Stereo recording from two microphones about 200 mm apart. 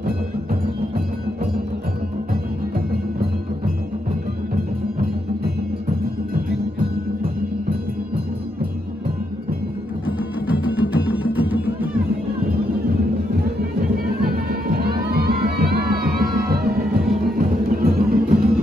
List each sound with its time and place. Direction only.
0.0 s music: 45° right (ahead or behind)
10.0 s music: 10° right (ahead or behind)
13.6 s music: 50° right (ahead or behind)